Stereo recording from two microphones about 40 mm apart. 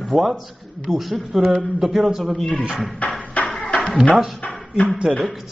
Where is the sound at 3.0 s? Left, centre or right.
Left.